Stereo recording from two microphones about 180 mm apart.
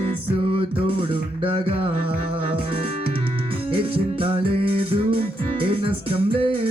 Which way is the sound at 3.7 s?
30° right (ahead or behind).